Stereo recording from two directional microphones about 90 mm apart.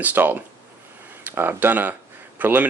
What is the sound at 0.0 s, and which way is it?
Speech, 20° right (ahead or behind).